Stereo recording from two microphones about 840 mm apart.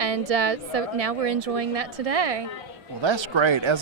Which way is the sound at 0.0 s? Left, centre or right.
Right.